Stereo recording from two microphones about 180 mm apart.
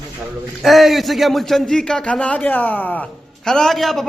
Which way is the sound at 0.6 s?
Centre (ahead or behind).